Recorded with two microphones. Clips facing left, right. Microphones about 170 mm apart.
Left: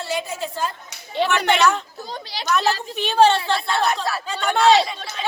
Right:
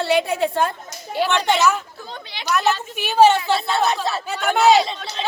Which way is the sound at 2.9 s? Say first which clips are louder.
Right 2 dB; 10° right (ahead or behind).